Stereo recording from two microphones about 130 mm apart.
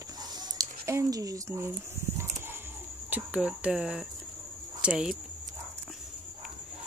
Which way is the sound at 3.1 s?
10° right (ahead or behind).